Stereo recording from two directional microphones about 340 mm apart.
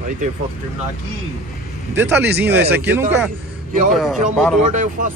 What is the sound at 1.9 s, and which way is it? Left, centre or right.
Speech, centre.